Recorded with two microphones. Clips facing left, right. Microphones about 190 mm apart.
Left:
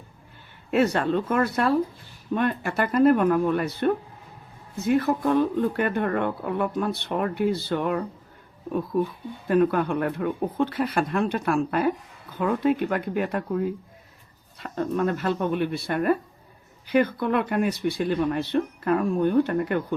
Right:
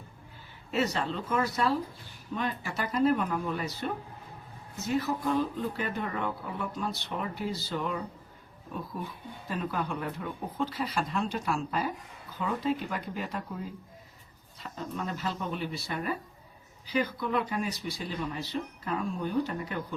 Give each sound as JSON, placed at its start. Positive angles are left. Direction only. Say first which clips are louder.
{"t": 0.7, "sound": "speech", "louder": "left 8 dB", "side_deg": 55}
{"t": 9.5, "sound": "speech", "louder": "left 12 dB", "side_deg": 60}